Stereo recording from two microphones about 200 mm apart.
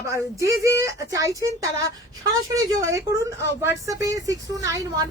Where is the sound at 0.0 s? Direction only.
15° right (ahead or behind).